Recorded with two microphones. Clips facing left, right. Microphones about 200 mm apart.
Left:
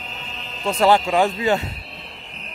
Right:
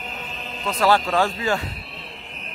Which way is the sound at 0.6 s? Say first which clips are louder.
Left 3 dB; 25° left (ahead or behind).